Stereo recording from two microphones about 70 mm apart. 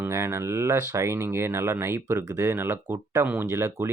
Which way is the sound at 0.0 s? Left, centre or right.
Right.